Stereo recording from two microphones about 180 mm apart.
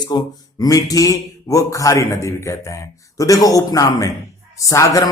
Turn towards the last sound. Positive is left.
turn(degrees=15)  # may be behind; listen again after turning